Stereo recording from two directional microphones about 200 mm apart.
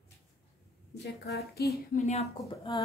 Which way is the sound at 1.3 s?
50° left (ahead or behind).